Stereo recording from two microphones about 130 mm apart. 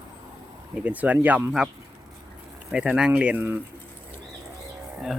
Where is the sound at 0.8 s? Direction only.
10° right (ahead or behind).